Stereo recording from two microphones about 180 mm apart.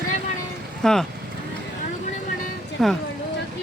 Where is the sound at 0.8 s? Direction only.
5° left (ahead or behind).